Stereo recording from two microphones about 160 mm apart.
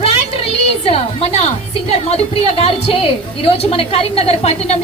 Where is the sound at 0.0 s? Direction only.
40° left (ahead or behind).